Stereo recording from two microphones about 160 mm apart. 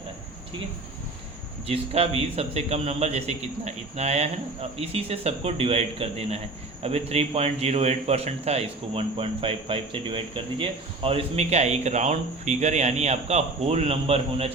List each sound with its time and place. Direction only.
1.6 s a man's voice: 40° right (ahead or behind)